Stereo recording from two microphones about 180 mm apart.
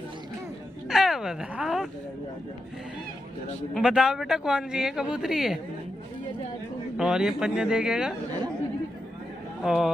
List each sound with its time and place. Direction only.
0.8 s a sound: centre (ahead or behind)
3.7 s speech: 5° right (ahead or behind)
7.0 s speech: 5° right (ahead or behind)
9.6 s speech: centre (ahead or behind)